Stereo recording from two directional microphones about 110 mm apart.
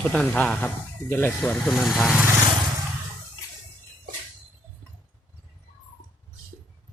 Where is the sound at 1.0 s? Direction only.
25° left (ahead or behind).